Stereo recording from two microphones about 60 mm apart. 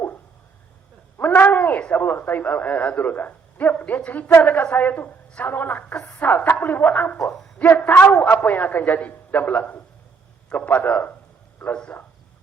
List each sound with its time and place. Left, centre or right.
1.2 s a man's voice: left
11.7 s a man's voice: centre